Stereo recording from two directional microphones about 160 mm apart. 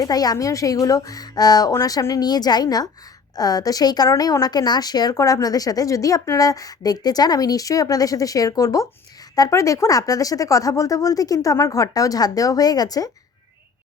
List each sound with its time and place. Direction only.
0.0 s a woman's voice: 25° left (ahead or behind)